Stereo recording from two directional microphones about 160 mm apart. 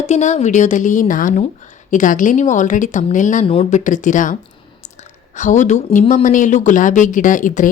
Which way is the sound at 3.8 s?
50° left (ahead or behind).